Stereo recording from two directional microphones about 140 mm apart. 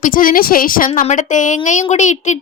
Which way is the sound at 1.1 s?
60° left (ahead or behind).